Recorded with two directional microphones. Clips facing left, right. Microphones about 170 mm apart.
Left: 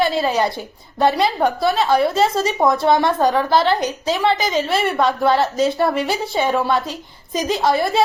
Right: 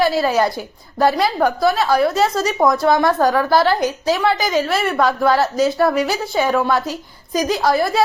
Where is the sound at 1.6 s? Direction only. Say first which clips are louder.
Even; 25° left (ahead or behind).